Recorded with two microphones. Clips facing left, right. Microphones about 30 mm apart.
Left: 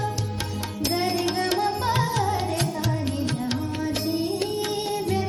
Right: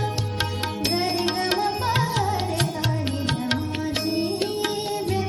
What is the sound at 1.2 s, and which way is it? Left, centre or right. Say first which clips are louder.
Tabla: right 1 dB; right.